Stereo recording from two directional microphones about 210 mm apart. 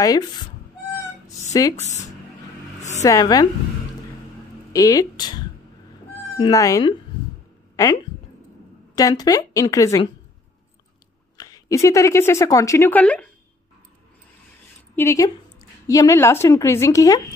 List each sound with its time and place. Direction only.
0.0 s speech: 20° left (ahead or behind)
1.5 s speech: 15° left (ahead or behind)
1.8 s speech: 35° left (ahead or behind)
3.0 s a woman's voice: 15° left (ahead or behind)
4.7 s a woman's voice: 15° left (ahead or behind)
6.4 s speech: 15° left (ahead or behind)
7.7 s a sound: 15° left (ahead or behind)
8.9 s a woman's voice: 15° left (ahead or behind)
11.3 s speech: 15° left (ahead or behind)
15.0 s a woman's voice: 15° left (ahead or behind)